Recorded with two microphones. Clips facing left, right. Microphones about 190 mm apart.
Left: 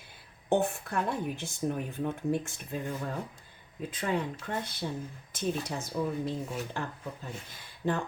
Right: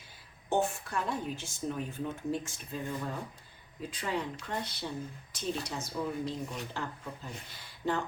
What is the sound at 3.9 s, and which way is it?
Speech, 50° left (ahead or behind).